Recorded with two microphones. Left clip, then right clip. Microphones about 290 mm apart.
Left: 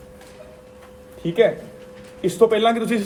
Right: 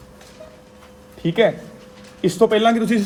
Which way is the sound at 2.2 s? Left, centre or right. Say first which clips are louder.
Right 1 dB; right.